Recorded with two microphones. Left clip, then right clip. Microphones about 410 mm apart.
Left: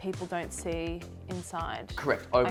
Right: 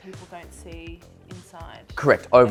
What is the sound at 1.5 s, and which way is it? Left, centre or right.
Speech, left.